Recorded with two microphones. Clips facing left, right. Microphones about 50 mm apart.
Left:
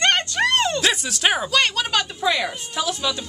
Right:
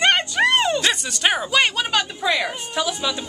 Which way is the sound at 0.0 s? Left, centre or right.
Centre.